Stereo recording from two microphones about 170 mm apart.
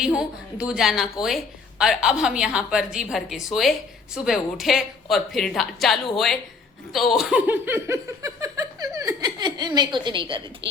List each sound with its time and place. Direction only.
0.0 s a woman's voice: 5° right (ahead or behind); by 10.4 s 30° right (ahead or behind)
10.6 s speech: 90° right